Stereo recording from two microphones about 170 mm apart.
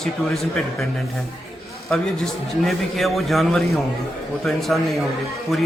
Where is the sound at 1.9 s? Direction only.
Centre (ahead or behind).